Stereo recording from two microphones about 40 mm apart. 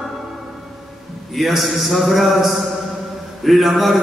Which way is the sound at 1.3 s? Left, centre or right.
Centre.